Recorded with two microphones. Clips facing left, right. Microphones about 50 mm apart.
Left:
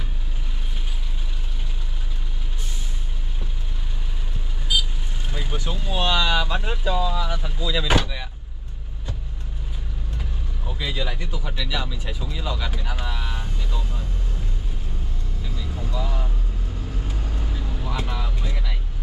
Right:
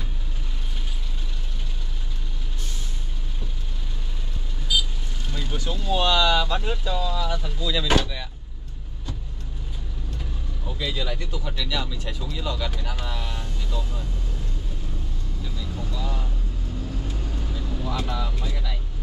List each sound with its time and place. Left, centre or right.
5.3 s speech: centre
10.7 s speech: centre
15.4 s vehicle: centre